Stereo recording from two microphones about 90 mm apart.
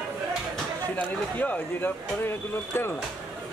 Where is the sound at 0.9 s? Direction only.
15° left (ahead or behind).